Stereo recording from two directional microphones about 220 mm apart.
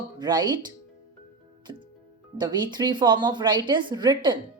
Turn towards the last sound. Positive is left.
turn(degrees=-20)  # may be behind; listen again after turning